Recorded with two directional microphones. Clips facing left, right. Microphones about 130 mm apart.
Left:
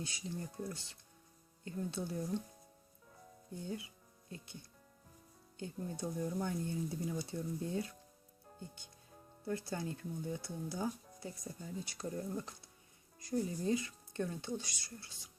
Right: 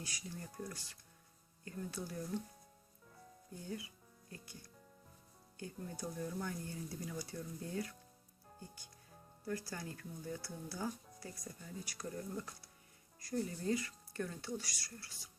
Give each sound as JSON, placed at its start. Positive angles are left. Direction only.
{"t": 0.0, "sound": "speech", "side_deg": 25}
{"t": 3.6, "sound": "speech", "side_deg": 25}